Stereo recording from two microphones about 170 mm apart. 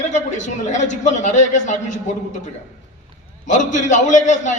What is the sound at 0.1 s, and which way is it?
A man's voice, 45° left (ahead or behind).